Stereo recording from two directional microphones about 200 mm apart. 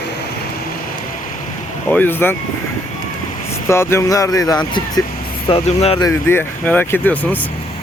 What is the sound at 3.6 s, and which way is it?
Speech, 15° left (ahead or behind).